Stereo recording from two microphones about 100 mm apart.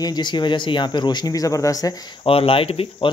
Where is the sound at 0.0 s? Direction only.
45° left (ahead or behind).